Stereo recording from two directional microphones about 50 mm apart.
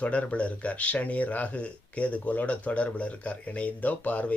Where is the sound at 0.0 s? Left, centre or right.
Left.